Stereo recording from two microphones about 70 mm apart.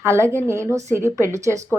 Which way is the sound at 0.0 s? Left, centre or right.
Right.